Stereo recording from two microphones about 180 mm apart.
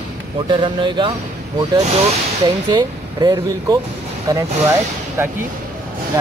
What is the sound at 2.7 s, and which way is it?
Speech, 20° right (ahead or behind).